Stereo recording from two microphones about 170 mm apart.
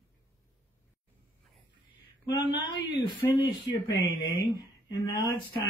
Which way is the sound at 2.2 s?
20° left (ahead or behind).